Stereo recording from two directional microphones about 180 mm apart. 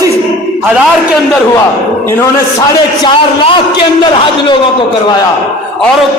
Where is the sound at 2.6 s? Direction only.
25° left (ahead or behind).